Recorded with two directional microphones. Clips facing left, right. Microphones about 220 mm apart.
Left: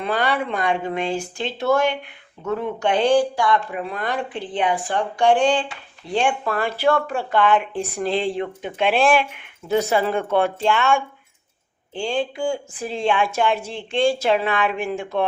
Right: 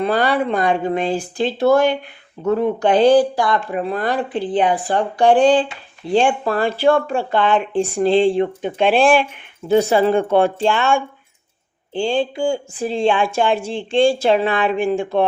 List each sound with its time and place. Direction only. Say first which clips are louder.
0.0 s speech: right 5 dB; 35° right (ahead or behind)